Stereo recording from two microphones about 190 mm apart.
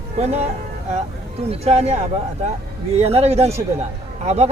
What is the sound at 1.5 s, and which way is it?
Speech, 30° right (ahead or behind).